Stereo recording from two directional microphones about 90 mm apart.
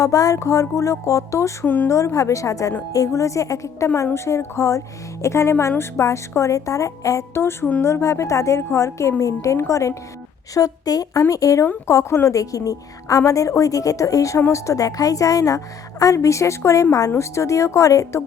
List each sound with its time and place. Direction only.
0.0 s a woman's voice: 40° left (ahead or behind)
1.6 s speech: 20° left (ahead or behind)
1.9 s a woman's voice: 35° left (ahead or behind)